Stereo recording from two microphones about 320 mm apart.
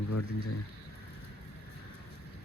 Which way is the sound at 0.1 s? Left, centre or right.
Left.